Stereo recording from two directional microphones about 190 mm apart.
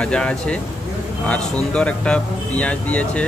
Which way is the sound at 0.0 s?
5° left (ahead or behind).